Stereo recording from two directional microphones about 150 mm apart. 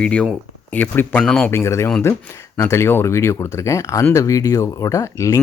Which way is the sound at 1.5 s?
20° left (ahead or behind).